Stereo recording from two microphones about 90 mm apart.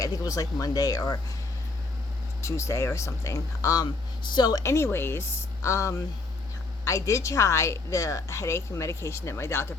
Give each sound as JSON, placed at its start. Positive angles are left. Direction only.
{"t": 0.0, "sound": "speech", "side_deg": 45}
{"t": 2.4, "sound": "a woman's voice", "side_deg": 35}
{"t": 4.3, "sound": "speech", "side_deg": 50}
{"t": 4.6, "sound": "a woman's voice", "side_deg": 30}